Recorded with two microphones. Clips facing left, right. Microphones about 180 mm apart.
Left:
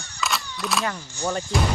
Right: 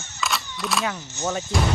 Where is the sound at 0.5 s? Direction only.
Centre (ahead or behind).